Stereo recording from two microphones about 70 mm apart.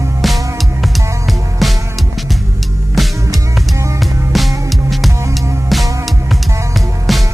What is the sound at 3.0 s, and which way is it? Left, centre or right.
Music, centre.